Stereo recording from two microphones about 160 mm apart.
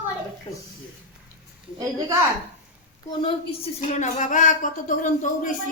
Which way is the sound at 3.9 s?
50° left (ahead or behind).